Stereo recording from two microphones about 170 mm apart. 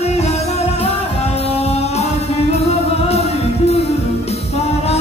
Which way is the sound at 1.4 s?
35° left (ahead or behind).